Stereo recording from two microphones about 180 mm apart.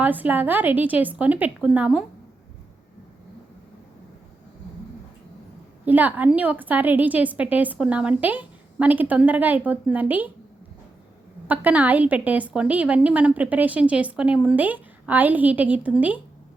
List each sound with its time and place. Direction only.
0.0 s a woman's voice: 10° right (ahead or behind)
5.8 s a woman's voice: 10° right (ahead or behind)
11.4 s a woman's voice: 10° right (ahead or behind)